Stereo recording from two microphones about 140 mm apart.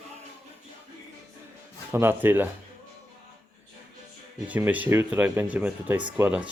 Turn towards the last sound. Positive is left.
turn(degrees=-10)  # may be behind; listen again after turning